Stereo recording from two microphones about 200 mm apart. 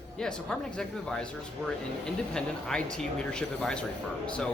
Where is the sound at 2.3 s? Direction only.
5° left (ahead or behind).